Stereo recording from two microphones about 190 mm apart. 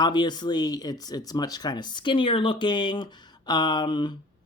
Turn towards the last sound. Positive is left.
turn(degrees=25)  # may be behind; listen again after turning